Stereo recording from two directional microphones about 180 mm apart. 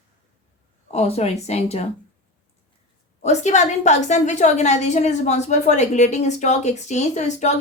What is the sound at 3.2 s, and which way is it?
A woman's voice, 40° left (ahead or behind).